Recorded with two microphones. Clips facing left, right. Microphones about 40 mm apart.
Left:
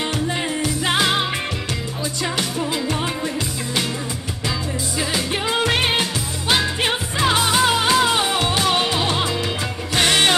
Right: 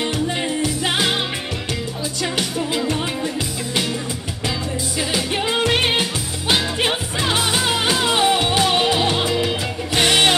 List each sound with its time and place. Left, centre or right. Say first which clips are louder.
0.0 s music: right 1 dB; centre
4.9 s music: right 1 dB; centre